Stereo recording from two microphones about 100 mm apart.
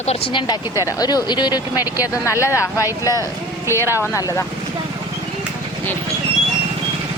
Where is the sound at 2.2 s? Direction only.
30° left (ahead or behind).